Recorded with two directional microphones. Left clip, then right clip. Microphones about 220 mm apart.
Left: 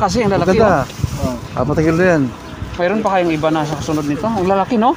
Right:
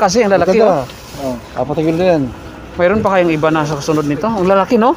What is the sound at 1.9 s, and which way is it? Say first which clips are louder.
Speech: right 1 dB; 65° left (ahead or behind).